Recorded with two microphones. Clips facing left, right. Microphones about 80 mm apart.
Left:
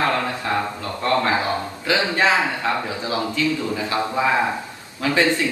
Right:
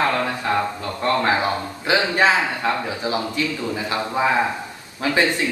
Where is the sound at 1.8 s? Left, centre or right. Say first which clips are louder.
Right 2 dB; right.